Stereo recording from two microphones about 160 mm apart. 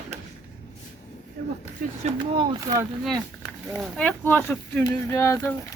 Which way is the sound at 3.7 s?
5° left (ahead or behind).